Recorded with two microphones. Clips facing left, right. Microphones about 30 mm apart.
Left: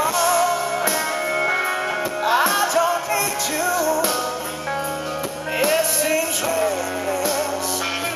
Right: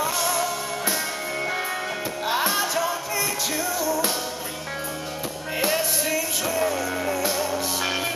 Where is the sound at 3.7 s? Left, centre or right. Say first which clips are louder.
Left 6 dB; centre.